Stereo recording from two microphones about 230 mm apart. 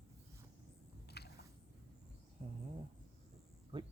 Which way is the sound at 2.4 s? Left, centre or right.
Right.